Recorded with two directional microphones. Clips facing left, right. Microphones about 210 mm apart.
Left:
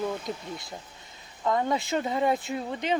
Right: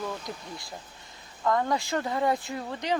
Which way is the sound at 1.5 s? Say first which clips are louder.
Even; 20° left (ahead or behind).